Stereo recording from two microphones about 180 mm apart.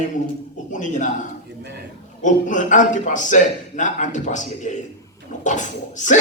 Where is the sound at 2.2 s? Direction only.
45° left (ahead or behind).